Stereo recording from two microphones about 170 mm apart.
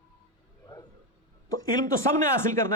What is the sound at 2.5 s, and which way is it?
Speech, 15° left (ahead or behind).